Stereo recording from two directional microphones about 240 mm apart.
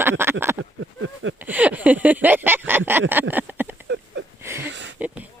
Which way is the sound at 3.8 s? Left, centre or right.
Right.